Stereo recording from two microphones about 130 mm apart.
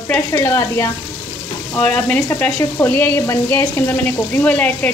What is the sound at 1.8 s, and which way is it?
Speech, 10° left (ahead or behind).